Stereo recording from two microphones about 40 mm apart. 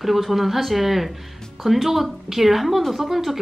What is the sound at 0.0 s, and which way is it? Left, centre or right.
A woman's voice, centre.